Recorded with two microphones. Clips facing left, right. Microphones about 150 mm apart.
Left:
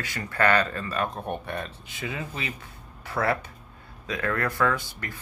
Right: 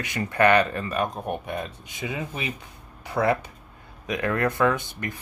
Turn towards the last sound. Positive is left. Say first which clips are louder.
# right 3 dB
turn(degrees=-20)  # may be behind; listen again after turning